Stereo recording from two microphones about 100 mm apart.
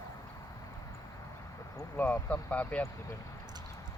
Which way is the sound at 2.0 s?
15° left (ahead or behind).